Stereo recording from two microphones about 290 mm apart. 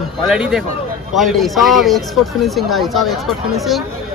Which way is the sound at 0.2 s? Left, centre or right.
Centre.